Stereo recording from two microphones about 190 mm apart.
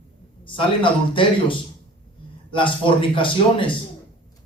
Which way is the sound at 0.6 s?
25° left (ahead or behind).